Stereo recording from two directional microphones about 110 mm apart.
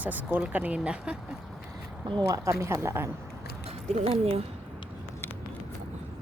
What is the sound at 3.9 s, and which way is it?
Speech, 65° right (ahead or behind).